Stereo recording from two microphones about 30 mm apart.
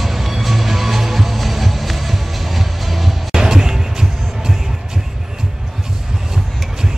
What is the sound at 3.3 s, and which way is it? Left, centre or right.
Music, centre.